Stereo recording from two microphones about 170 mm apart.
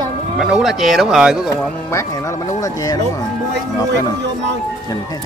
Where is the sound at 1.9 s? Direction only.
15° left (ahead or behind).